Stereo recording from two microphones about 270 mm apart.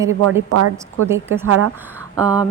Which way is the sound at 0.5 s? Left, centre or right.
Right.